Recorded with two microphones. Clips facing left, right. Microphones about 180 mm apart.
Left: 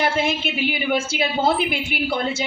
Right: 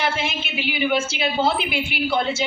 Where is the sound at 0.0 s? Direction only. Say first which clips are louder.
Left 4 dB; 50° left (ahead or behind).